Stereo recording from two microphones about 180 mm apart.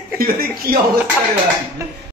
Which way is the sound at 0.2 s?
55° right (ahead or behind).